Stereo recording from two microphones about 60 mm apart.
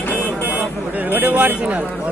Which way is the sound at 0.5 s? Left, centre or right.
Right.